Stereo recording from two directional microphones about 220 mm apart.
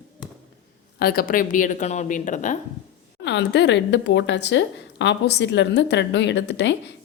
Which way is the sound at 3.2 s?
50° left (ahead or behind).